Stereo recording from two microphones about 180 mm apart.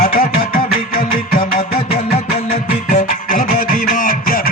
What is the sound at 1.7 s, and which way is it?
Music, 35° left (ahead or behind).